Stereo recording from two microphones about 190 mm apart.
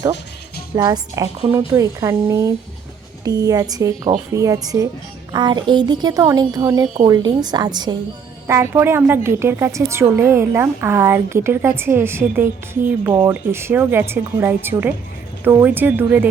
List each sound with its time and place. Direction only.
0.8 s a woman's voice: 20° right (ahead or behind)